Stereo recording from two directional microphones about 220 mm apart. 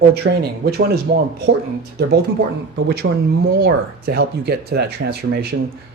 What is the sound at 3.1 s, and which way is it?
Speech, 65° right (ahead or behind).